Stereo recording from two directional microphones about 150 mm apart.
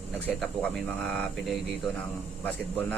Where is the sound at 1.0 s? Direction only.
5° left (ahead or behind).